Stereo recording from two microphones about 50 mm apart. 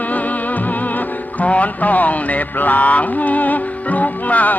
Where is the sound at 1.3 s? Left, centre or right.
Left.